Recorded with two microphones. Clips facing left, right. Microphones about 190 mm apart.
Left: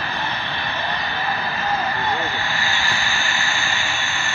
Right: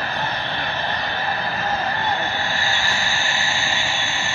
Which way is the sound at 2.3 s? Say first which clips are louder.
Right 1 dB; 40° right (ahead or behind).